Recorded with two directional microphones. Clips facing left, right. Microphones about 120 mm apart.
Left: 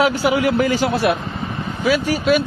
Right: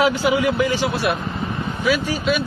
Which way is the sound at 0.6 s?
45° left (ahead or behind).